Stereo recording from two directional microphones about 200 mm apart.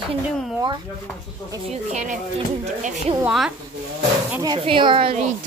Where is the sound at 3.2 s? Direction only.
Centre (ahead or behind).